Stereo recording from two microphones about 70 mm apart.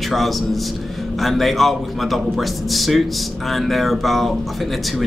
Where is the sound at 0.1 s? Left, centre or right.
Centre.